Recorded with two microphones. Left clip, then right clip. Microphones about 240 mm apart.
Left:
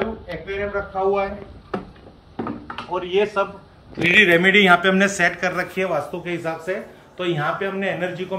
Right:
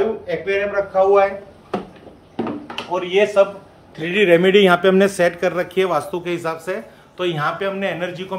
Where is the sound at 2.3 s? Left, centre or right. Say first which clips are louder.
Right 4 dB; right.